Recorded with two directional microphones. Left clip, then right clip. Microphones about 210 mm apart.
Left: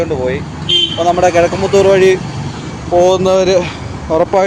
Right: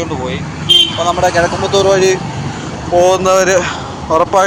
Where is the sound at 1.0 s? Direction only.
45° left (ahead or behind).